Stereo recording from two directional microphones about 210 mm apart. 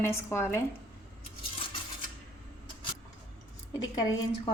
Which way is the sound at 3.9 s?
20° left (ahead or behind).